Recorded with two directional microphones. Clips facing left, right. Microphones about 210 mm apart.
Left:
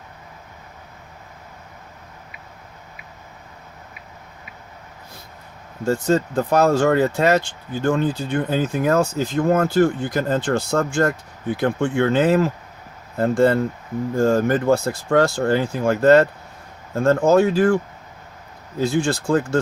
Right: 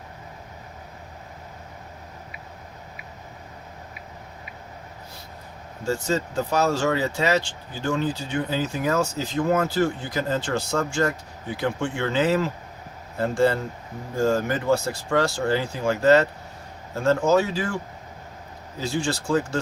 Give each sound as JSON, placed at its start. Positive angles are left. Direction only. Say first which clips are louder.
{"t": 5.8, "sound": "speech", "louder": "left 6 dB", "side_deg": 55}
{"t": 18.8, "sound": "speech", "louder": "left 6 dB", "side_deg": 55}